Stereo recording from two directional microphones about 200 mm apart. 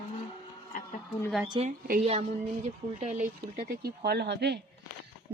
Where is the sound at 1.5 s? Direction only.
30° right (ahead or behind); by 4.6 s 55° right (ahead or behind).